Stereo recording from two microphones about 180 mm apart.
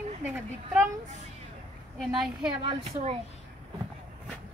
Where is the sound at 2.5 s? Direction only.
35° right (ahead or behind).